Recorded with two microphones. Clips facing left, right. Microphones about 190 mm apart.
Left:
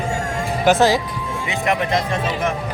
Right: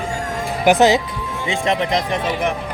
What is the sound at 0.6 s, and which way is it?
Speech, 15° right (ahead or behind).